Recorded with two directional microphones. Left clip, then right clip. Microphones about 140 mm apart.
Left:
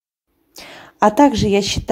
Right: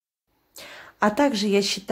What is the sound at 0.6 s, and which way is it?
A woman's voice, 25° left (ahead or behind).